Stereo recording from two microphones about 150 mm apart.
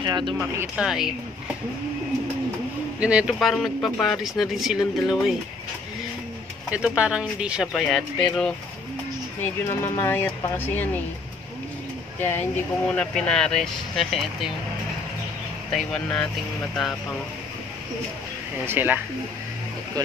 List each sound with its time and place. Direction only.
0.0 s speech: 30° right (ahead or behind)
0.4 s speech: 10° right (ahead or behind)
3.0 s speech: 5° right (ahead or behind)
6.7 s speech: 5° right (ahead or behind)
9.4 s speech: 20° left (ahead or behind)
12.2 s speech: 15° left (ahead or behind)
15.7 s speech: 5° left (ahead or behind)
18.7 s speech: 15° right (ahead or behind)